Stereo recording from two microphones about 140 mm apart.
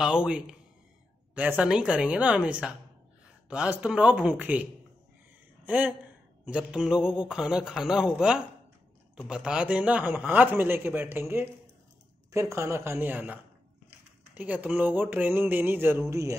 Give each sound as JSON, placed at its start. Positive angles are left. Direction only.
{"t": 0.0, "sound": "a man's voice", "side_deg": -5}
{"t": 5.7, "sound": "a man's voice", "side_deg": -10}